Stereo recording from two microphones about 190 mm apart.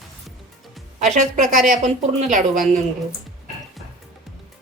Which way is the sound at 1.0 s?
40° right (ahead or behind).